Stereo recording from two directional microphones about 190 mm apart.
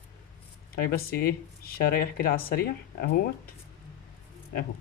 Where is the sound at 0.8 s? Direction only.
55° left (ahead or behind).